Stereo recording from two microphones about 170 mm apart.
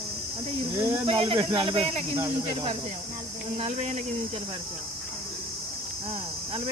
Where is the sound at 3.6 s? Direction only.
45° right (ahead or behind).